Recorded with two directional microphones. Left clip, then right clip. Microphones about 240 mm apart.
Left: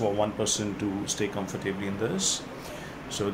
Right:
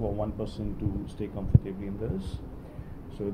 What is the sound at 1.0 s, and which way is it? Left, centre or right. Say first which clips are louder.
Speech: left 7 dB; centre.